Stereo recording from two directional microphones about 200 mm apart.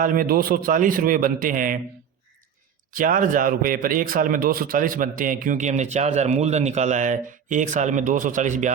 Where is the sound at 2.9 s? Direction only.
45° right (ahead or behind).